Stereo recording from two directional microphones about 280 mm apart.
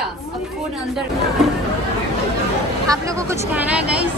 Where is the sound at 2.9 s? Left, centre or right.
Centre.